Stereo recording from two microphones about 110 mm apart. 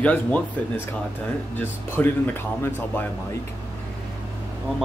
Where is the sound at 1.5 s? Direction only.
15° left (ahead or behind).